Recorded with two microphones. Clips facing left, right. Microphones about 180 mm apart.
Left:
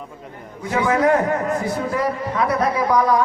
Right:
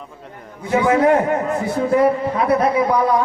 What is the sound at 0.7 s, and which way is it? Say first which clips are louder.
A man's voice: right 3 dB; 20° right (ahead or behind).